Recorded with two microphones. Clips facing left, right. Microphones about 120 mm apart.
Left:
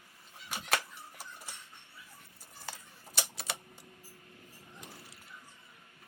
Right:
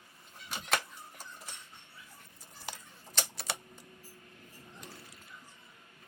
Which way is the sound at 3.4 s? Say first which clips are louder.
Right 2 dB; 15° right (ahead or behind).